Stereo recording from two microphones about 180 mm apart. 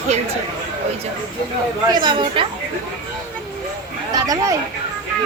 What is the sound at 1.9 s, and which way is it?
Speech, 25° right (ahead or behind).